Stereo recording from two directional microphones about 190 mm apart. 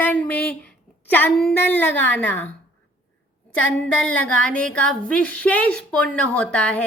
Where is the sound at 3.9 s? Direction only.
5° left (ahead or behind).